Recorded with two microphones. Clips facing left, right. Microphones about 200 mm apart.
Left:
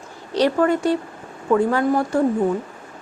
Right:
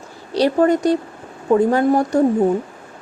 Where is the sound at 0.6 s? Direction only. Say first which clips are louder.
Right 3 dB; 40° right (ahead or behind).